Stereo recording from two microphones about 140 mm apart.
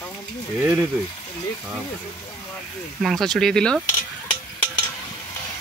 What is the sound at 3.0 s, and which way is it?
Speech, centre (ahead or behind).